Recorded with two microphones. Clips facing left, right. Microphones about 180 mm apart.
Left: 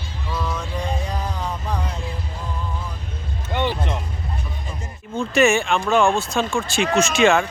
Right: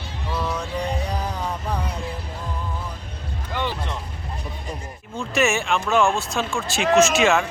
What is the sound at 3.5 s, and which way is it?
Music, 25° left (ahead or behind).